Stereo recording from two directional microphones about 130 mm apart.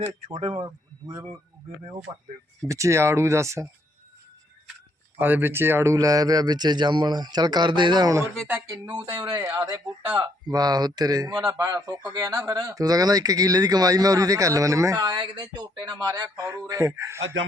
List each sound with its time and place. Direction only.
0.3 s speech: 45° right (ahead or behind)
0.6 s a man's voice: 30° right (ahead or behind)
2.6 s a man's voice: 25° right (ahead or behind)
5.2 s a man's voice: 15° right (ahead or behind)